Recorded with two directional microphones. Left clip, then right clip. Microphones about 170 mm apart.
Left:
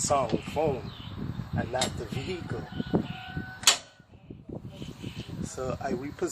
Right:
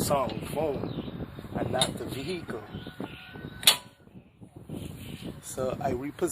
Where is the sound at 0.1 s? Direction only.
30° right (ahead or behind).